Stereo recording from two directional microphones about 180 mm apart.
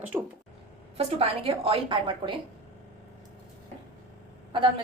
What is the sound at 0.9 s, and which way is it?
A woman's voice, 30° right (ahead or behind).